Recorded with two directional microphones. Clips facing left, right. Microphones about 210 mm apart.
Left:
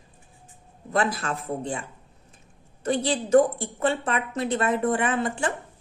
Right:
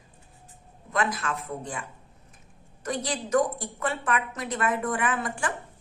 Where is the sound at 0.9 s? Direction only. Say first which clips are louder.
Left 3 dB; 30° left (ahead or behind).